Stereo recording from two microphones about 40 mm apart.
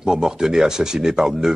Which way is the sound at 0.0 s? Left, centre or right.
Centre.